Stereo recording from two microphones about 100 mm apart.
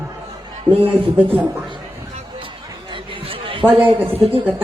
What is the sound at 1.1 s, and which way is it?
Speech, 15° right (ahead or behind).